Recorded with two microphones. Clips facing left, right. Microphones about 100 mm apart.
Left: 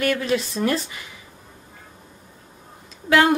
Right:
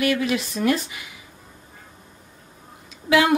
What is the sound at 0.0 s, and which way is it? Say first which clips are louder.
Speech: even; 40° left (ahead or behind).